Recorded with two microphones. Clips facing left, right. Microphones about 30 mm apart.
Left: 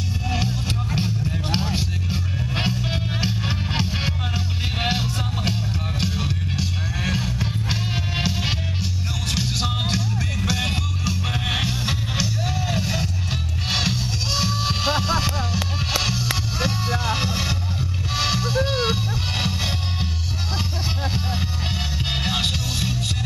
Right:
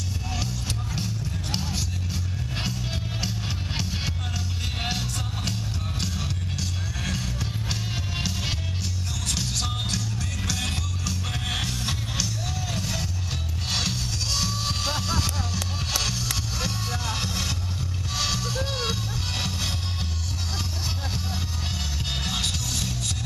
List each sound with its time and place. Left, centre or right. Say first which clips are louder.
0.3 s music: left 6 dB; left
22.1 s music: left 5 dB; left